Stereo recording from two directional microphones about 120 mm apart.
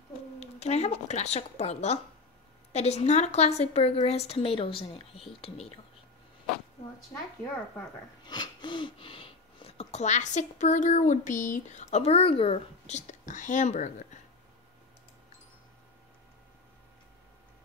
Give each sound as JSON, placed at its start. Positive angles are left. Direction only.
{"t": 0.4, "sound": "a woman's voice", "side_deg": 65}
{"t": 8.3, "sound": "speech", "side_deg": 40}